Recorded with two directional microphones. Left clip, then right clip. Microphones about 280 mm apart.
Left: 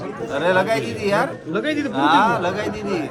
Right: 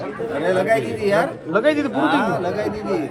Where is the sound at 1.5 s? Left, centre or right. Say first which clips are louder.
Right 5 dB; centre.